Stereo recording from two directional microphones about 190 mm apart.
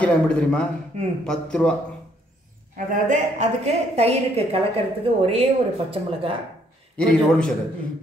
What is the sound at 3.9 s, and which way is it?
A woman's voice, 35° right (ahead or behind).